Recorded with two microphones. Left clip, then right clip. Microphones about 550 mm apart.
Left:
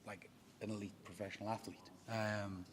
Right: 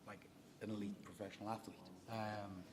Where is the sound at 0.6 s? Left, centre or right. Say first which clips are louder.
Left 2 dB; centre.